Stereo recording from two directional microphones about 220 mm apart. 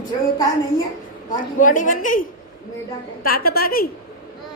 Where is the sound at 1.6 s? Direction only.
35° left (ahead or behind).